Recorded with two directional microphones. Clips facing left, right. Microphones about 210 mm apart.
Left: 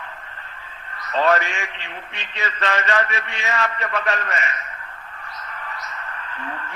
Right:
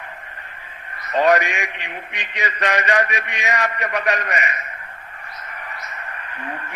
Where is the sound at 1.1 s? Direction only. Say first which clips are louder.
Right 3 dB; 15° right (ahead or behind).